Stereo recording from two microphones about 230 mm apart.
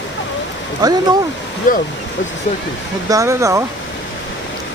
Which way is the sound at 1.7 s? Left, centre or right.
Left.